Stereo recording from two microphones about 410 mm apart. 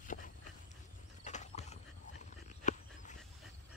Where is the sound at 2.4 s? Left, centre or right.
Centre.